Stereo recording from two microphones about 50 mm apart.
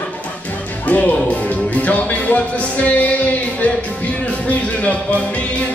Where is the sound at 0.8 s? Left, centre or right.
Left.